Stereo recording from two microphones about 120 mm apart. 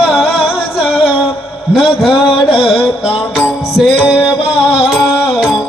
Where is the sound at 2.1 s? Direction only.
45° left (ahead or behind).